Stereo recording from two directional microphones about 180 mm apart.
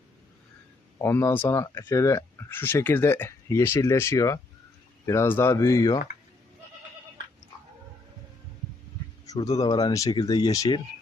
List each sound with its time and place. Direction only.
0.9 s speech: 15° left (ahead or behind)
9.2 s a sound: 20° left (ahead or behind)
9.6 s speech: 20° left (ahead or behind)